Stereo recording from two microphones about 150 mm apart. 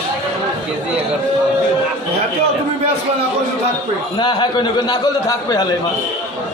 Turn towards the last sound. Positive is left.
turn(degrees=25)  # may be behind; listen again after turning